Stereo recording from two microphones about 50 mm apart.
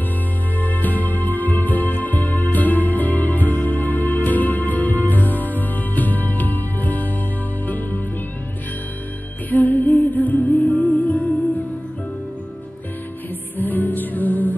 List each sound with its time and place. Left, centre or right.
0.6 s music: left
9.5 s music: left
13.6 s music: left